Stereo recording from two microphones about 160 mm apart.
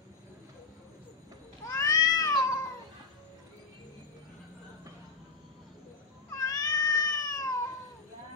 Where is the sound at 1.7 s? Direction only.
20° left (ahead or behind).